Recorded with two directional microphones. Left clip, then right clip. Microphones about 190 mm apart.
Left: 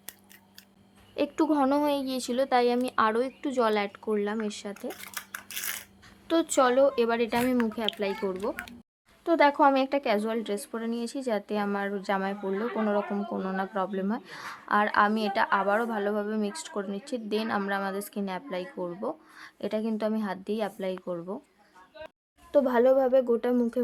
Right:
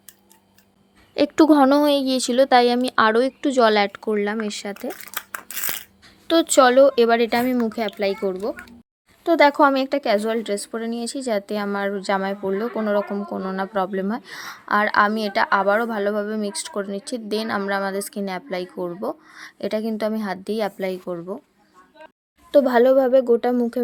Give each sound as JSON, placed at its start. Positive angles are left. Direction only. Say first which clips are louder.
{"t": 1.1, "sound": "speech", "louder": "right 11 dB", "side_deg": -30}
{"t": 6.2, "sound": "speech", "louder": "right 9 dB", "side_deg": -25}
{"t": 8.4, "sound": "speech", "louder": "right 5 dB", "side_deg": -15}
{"t": 9.2, "sound": "speech", "louder": "right 6 dB", "side_deg": -25}
{"t": 22.5, "sound": "speech", "louder": "right 7 dB", "side_deg": -30}